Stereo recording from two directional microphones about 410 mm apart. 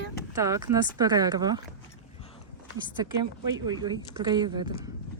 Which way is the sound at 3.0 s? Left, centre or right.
Centre.